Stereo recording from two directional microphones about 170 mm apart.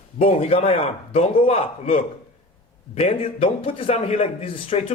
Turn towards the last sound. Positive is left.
turn(degrees=30)  # may be behind; listen again after turning